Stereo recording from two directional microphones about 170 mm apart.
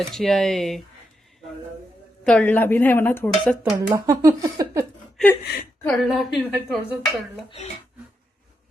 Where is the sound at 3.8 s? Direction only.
20° right (ahead or behind).